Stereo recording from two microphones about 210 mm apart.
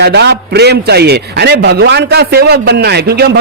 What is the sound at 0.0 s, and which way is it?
A man's voice, 50° right (ahead or behind).